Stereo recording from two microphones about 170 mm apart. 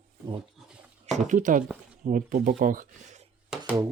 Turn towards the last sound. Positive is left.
turn(degrees=-5)  # may be behind; listen again after turning